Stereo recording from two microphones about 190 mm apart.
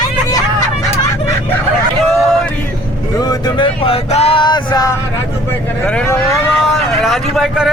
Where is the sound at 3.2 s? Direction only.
20° left (ahead or behind).